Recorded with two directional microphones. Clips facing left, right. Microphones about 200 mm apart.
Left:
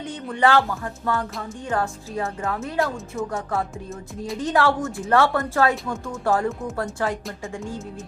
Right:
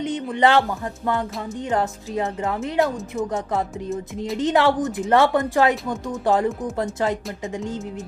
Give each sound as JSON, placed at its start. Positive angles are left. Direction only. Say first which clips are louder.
{"t": 0.0, "sound": "speech", "louder": "right 2 dB", "side_deg": -20}